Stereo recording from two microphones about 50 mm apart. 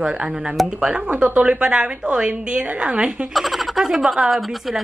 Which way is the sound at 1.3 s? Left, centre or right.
Right.